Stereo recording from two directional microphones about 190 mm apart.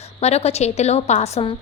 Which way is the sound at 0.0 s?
35° left (ahead or behind).